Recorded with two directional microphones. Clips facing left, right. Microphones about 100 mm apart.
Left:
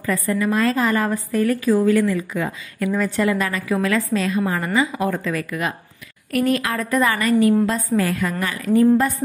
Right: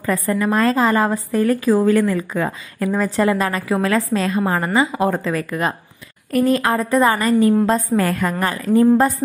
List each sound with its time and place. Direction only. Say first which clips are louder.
0.0 s a woman's voice: right 2 dB; 40° right (ahead or behind)
8.6 s a woman's voice: right 2 dB; 30° right (ahead or behind)